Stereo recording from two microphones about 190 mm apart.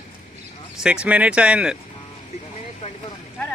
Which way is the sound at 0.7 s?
5° right (ahead or behind).